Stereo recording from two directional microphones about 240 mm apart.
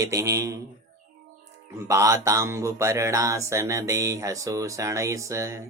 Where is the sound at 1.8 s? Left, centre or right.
Centre.